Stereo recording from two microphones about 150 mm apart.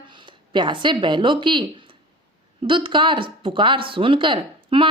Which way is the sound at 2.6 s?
35° right (ahead or behind).